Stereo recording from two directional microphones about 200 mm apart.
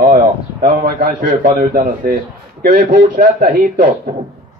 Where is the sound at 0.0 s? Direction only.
45° right (ahead or behind).